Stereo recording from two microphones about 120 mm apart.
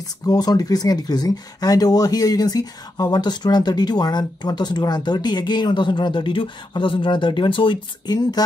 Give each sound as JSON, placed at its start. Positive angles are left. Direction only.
{"t": 0.3, "sound": "speech", "side_deg": 30}